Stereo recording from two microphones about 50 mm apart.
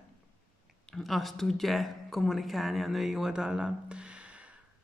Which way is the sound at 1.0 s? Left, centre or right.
Centre.